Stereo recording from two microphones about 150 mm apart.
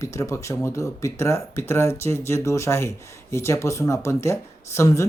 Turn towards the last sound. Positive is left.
turn(degrees=20)  # may be behind; listen again after turning